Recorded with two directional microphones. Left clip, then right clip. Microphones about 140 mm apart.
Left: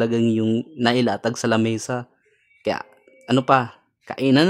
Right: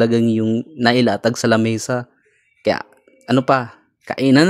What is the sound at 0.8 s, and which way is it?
Speech, 15° right (ahead or behind).